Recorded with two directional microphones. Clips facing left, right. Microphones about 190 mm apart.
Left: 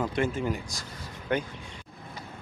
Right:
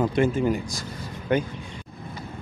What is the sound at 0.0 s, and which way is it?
Speech, 20° right (ahead or behind).